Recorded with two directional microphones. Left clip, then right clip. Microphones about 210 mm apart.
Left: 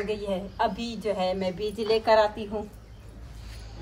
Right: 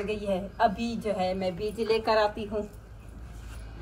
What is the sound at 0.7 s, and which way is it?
Speech, 45° left (ahead or behind).